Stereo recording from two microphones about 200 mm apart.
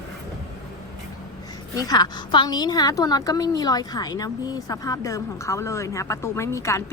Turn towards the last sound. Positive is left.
turn(degrees=15)  # may be behind; listen again after turning